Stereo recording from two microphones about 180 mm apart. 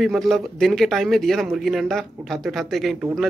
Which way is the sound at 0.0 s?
Centre (ahead or behind).